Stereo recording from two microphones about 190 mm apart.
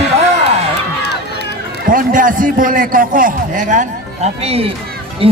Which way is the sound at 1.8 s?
45° right (ahead or behind).